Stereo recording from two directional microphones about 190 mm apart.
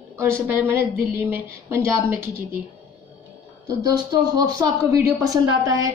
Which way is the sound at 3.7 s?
20° right (ahead or behind).